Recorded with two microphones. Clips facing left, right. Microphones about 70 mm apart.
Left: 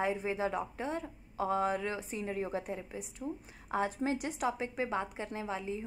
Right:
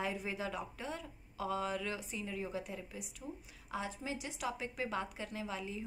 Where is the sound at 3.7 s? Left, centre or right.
Left.